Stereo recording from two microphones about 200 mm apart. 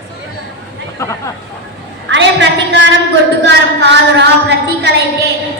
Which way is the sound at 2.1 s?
60° right (ahead or behind).